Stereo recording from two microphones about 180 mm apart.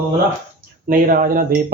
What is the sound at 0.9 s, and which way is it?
Speech, 50° right (ahead or behind).